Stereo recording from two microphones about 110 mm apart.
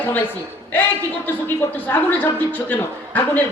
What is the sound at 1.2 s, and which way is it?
A man's voice, 20° left (ahead or behind).